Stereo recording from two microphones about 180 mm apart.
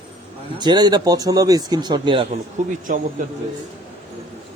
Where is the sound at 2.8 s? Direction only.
45° right (ahead or behind).